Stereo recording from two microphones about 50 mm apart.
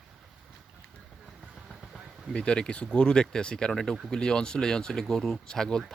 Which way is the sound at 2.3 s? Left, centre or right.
Centre.